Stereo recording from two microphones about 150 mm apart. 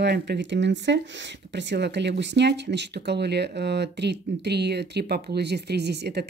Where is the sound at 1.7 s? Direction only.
75° right (ahead or behind).